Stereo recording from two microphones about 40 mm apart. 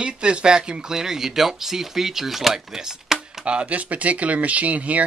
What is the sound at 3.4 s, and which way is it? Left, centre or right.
Speech, right.